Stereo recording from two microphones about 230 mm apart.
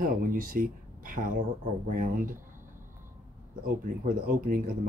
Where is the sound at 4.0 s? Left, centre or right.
Right.